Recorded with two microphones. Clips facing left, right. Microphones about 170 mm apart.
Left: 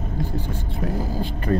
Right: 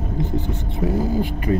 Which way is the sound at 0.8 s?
5° right (ahead or behind).